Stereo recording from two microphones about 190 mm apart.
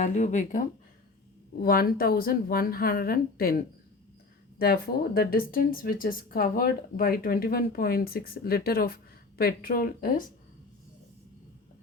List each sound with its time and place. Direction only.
0.0 s speech: 40° left (ahead or behind)
1.6 s speech: 55° left (ahead or behind)